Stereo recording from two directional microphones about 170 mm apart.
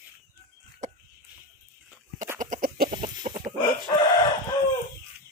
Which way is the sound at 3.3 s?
45° right (ahead or behind).